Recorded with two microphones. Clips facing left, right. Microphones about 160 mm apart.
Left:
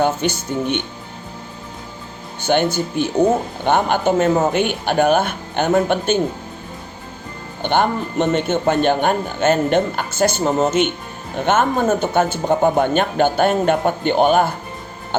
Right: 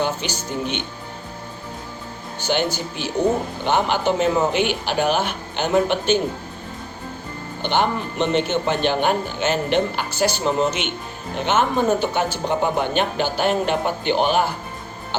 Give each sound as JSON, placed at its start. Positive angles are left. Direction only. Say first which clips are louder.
{"t": 0.2, "sound": "a man's voice", "louder": "left 8 dB", "side_deg": 50}
{"t": 2.4, "sound": "a man's voice", "louder": "left 5 dB", "side_deg": 55}
{"t": 7.6, "sound": "a man's voice", "louder": "left 3 dB", "side_deg": 50}